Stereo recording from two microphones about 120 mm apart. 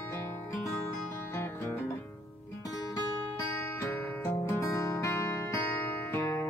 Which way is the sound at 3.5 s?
25° left (ahead or behind).